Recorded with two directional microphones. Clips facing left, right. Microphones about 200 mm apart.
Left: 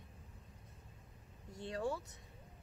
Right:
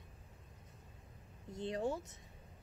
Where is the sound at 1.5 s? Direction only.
20° right (ahead or behind).